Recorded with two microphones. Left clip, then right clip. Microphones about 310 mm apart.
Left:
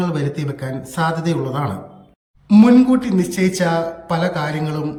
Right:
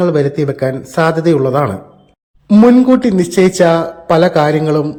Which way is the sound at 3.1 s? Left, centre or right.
Centre.